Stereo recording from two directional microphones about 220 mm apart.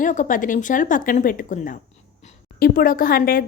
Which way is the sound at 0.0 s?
35° left (ahead or behind).